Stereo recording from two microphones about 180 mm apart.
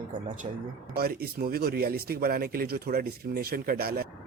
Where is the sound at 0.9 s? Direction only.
60° right (ahead or behind).